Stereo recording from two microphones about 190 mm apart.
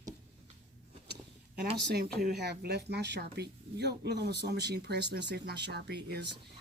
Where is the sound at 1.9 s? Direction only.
55° right (ahead or behind).